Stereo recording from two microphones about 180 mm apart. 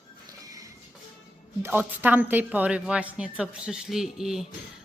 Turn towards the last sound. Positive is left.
turn(degrees=0)  # may be behind; listen again after turning